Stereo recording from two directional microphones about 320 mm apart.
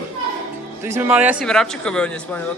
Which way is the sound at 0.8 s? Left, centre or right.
Centre.